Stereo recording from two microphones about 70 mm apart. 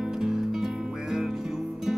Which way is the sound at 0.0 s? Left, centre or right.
Centre.